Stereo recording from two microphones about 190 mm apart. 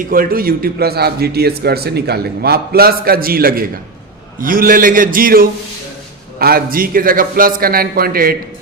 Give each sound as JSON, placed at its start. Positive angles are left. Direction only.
{"t": 0.0, "sound": "a man's voice", "side_deg": -50}